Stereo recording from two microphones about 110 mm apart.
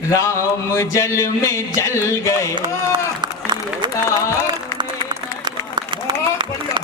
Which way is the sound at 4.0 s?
25° left (ahead or behind).